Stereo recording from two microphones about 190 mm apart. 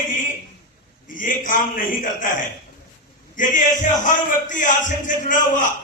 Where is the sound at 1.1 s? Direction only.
45° left (ahead or behind).